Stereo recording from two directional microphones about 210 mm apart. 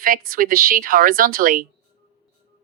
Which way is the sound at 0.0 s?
40° right (ahead or behind).